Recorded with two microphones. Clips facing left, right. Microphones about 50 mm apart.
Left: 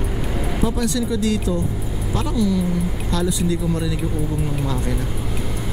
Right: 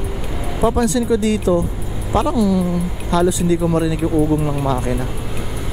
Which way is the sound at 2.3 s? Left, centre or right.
Centre.